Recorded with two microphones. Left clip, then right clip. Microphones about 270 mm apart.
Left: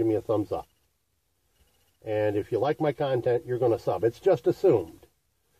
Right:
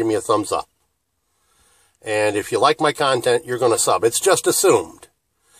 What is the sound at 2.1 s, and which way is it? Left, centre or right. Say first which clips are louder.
Speech: right 7 dB; centre.